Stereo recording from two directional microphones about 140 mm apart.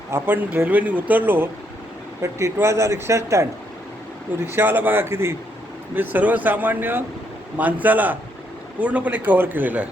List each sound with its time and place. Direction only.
0.1 s speech: 15° right (ahead or behind)
4.4 s speech: 15° right (ahead or behind)